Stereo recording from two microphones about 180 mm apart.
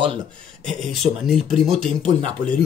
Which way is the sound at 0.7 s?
Centre (ahead or behind).